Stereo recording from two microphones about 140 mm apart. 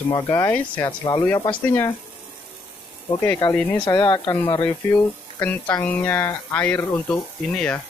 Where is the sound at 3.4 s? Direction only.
35° left (ahead or behind).